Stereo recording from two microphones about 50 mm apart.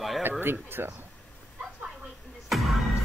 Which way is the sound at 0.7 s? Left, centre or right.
Right.